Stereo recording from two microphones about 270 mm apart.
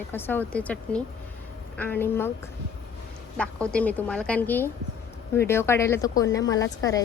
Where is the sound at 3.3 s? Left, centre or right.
Centre.